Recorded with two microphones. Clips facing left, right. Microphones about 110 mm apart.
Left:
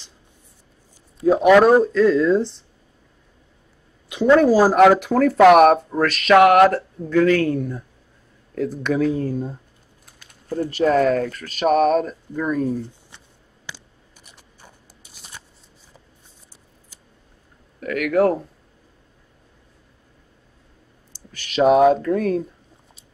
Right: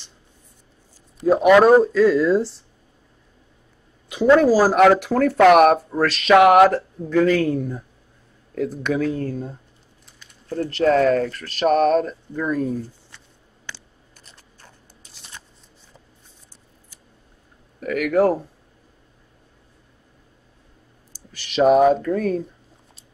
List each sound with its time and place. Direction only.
1.2 s speech: centre (ahead or behind)
4.1 s a woman's voice: 5° right (ahead or behind)
10.0 s typing: 50° left (ahead or behind)
10.5 s speech: 10° left (ahead or behind)
13.7 s a sound: 15° left (ahead or behind)
14.2 s scissors: 10° left (ahead or behind)
17.7 s speech: 5° right (ahead or behind)
21.5 s speech: centre (ahead or behind)